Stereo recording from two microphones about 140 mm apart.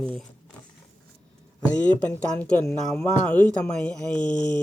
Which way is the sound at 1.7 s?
10° left (ahead or behind).